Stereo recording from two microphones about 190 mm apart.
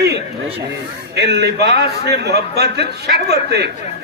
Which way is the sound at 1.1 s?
65° right (ahead or behind).